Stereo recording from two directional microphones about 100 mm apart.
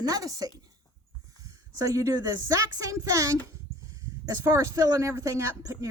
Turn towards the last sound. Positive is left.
turn(degrees=-35)  # may be behind; listen again after turning